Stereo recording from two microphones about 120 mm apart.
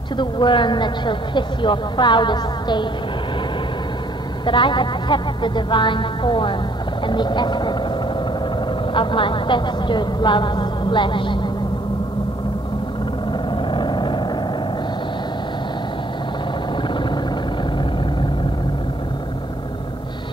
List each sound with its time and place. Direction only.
0.2 s a woman's voice: 40° left (ahead or behind)
4.5 s a woman's voice: 40° left (ahead or behind)
8.9 s a woman's voice: 45° left (ahead or behind)
13.7 s vehicle: 40° left (ahead or behind)